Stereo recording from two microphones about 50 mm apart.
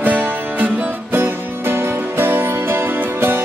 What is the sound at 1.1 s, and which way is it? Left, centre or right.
Music, right.